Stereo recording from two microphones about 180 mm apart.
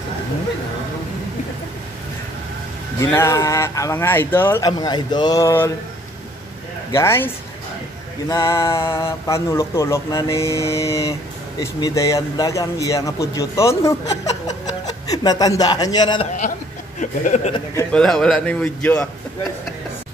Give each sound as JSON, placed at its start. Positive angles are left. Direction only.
{"t": 3.0, "sound": "speech", "side_deg": 15}
{"t": 6.9, "sound": "speech", "side_deg": 15}
{"t": 8.3, "sound": "speech", "side_deg": 15}
{"t": 17.0, "sound": "speech", "side_deg": 45}
{"t": 17.9, "sound": "speech", "side_deg": 5}